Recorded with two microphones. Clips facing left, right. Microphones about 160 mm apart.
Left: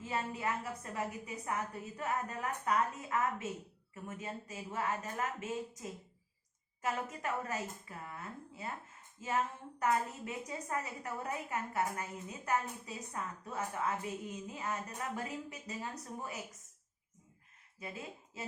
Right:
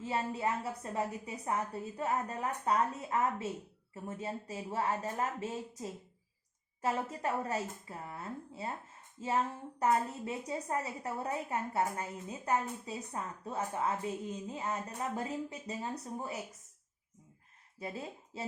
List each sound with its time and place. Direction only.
0.0 s a woman's voice: 30° right (ahead or behind)
9.8 s a woman's voice: 30° right (ahead or behind)
17.7 s speech: 35° right (ahead or behind)